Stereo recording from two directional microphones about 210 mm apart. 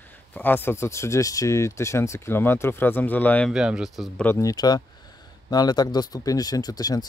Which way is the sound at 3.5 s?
5° right (ahead or behind).